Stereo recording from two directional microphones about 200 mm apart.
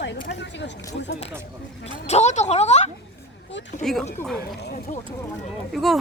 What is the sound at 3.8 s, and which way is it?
Speech, centre (ahead or behind).